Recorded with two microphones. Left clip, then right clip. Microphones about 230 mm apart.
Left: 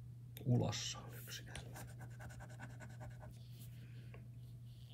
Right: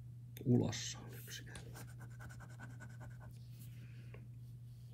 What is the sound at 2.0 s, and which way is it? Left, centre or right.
Scratch, centre.